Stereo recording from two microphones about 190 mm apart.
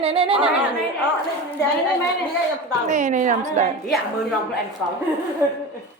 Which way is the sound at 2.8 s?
40° right (ahead or behind).